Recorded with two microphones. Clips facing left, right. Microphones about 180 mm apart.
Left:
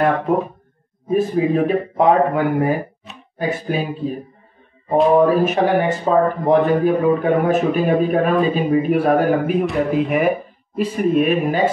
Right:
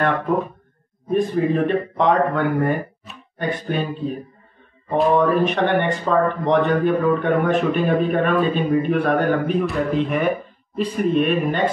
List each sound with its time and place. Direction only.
0.2 s speech: 25° left (ahead or behind)
1.0 s speech: 5° left (ahead or behind)